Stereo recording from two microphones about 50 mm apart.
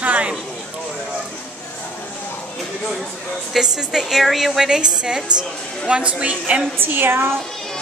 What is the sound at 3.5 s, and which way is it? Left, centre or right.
A woman's voice, centre.